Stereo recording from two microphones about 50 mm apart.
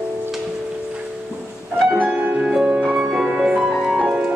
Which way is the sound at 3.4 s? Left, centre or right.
Centre.